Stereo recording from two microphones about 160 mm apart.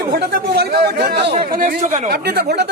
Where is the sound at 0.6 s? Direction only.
90° right.